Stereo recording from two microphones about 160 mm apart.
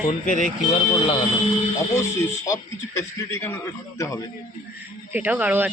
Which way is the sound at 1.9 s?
15° left (ahead or behind).